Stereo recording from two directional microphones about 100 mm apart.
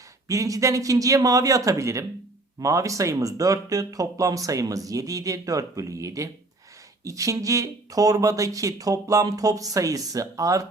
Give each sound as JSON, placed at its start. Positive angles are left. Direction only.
{"t": 0.3, "sound": "speech", "side_deg": -35}